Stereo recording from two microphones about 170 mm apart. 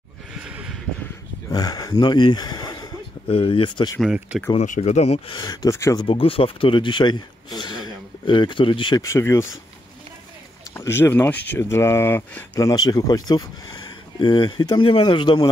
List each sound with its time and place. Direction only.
0.4 s a sound: 5° right (ahead or behind)
1.5 s speech: 20° left (ahead or behind)
4.0 s speech: 5° right (ahead or behind)
4.6 s speech: 45° left (ahead or behind); by 6.0 s 20° left (ahead or behind)
6.0 s speech: 30° left (ahead or behind); by 9.5 s 15° left (ahead or behind)
10.7 s speech: 15° left (ahead or behind)